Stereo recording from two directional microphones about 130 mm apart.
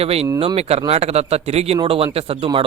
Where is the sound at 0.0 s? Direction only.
50° right (ahead or behind).